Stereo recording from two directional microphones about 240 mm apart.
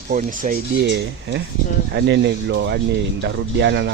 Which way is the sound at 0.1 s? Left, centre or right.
Right.